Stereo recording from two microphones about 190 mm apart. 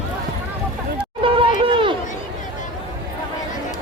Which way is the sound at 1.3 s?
30° right (ahead or behind).